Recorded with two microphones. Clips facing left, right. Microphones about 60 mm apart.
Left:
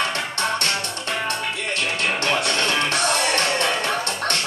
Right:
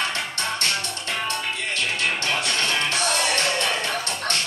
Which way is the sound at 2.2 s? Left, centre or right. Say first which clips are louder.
Left 3 dB; left.